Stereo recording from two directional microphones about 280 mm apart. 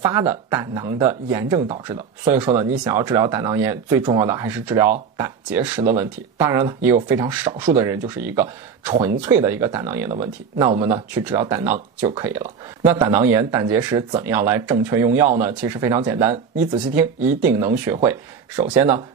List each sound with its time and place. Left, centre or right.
0.0 s speech: centre
2.2 s speech: centre
17.4 s speech: centre